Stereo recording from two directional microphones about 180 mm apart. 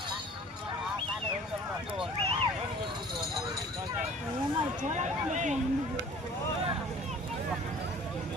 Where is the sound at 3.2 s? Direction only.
Centre (ahead or behind).